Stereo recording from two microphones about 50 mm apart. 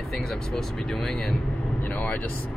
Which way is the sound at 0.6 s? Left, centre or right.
Centre.